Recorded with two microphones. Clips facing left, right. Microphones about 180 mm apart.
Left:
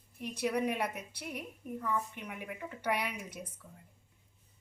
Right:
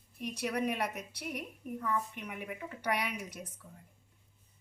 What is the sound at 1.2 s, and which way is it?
Speech, 5° right (ahead or behind).